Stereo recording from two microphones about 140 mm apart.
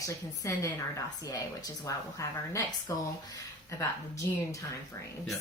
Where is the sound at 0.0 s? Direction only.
20° left (ahead or behind).